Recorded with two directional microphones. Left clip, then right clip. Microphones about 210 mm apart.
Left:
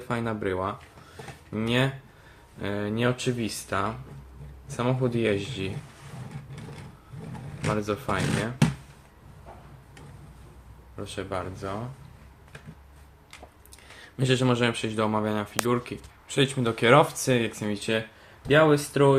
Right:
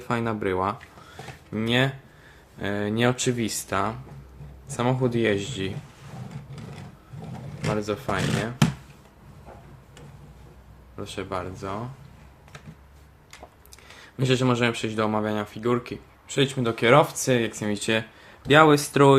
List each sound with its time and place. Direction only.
0.1 s speech: 15° right (ahead or behind)
7.6 s speech: centre (ahead or behind)
10.9 s speech: 5° right (ahead or behind)
14.0 s speech: 5° right (ahead or behind); by 19.1 s 25° right (ahead or behind)